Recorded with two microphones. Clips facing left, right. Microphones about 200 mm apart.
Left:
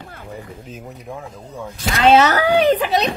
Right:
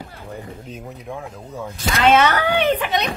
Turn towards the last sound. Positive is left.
turn(degrees=35)  # may be behind; listen again after turning